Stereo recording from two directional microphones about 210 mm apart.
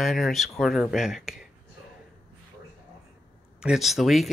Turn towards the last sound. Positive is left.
turn(degrees=0)  # may be behind; listen again after turning